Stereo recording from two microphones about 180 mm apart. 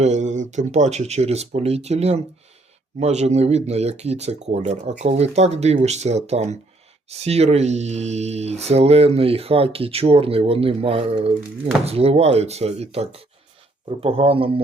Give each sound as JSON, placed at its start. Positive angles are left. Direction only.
{"t": 0.0, "sound": "speech", "side_deg": -40}